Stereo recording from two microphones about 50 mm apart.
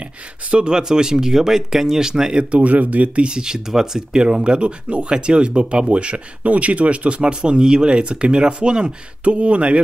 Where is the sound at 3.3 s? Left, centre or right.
Centre.